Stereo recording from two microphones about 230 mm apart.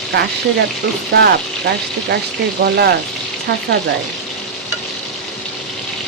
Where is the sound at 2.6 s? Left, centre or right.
Right.